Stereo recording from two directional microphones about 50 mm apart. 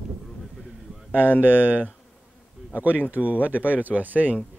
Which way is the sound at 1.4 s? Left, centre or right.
Right.